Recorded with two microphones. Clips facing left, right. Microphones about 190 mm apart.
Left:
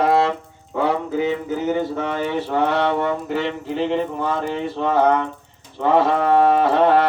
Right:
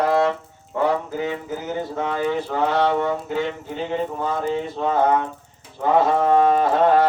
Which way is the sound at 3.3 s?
75° left (ahead or behind).